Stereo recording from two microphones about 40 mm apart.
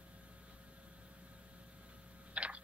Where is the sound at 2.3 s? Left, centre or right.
Right.